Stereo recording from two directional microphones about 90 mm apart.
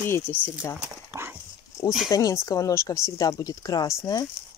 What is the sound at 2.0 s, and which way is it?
Speech, 40° left (ahead or behind).